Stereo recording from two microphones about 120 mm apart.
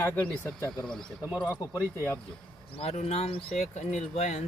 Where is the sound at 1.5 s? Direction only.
30° left (ahead or behind).